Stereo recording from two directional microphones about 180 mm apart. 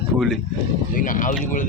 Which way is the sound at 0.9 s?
50° left (ahead or behind).